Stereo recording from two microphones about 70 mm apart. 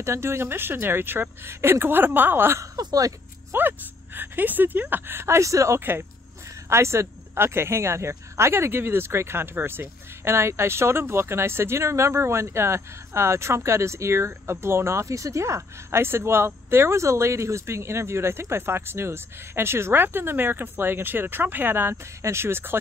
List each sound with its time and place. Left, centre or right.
0.0 s speech: right
2.8 s speech: right
3.5 s speech: right